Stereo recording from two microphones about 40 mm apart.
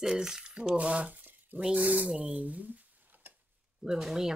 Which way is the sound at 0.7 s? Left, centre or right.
Right.